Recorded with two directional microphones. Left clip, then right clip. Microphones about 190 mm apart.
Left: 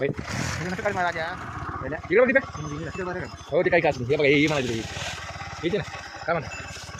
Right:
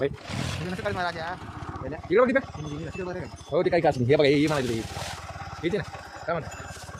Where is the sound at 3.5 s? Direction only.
10° right (ahead or behind).